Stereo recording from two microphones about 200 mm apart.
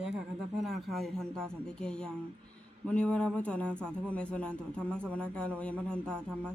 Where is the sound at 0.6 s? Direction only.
Centre (ahead or behind).